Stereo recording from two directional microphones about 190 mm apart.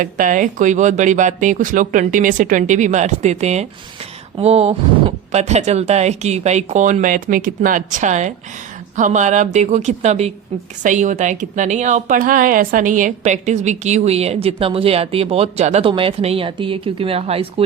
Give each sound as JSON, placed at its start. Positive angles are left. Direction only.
{"t": 0.0, "sound": "a woman's voice", "side_deg": -45}